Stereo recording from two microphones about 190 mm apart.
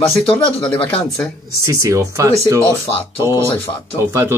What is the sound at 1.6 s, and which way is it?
Speech, 15° right (ahead or behind).